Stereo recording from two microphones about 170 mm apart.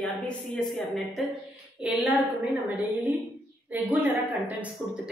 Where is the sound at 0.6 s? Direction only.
Centre (ahead or behind).